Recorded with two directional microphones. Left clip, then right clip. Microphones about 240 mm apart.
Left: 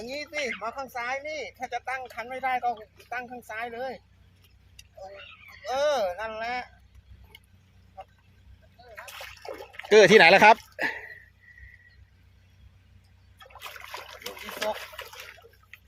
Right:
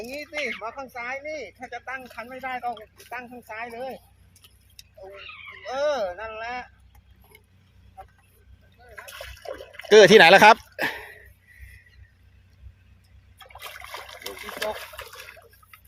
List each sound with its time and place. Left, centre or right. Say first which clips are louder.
0.0 s speech: right 1 dB; left
5.6 s speech: even; left
7.3 s mechanisms: left 3 dB; left
9.0 s water: right 3 dB; centre
9.9 s speech: right 3 dB; right
13.4 s trickle: right 2 dB; centre